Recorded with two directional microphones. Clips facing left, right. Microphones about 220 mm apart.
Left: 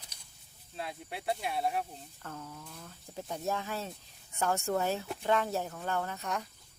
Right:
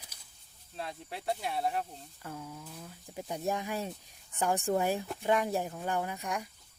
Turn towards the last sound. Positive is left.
turn(degrees=-15)  # may be behind; listen again after turning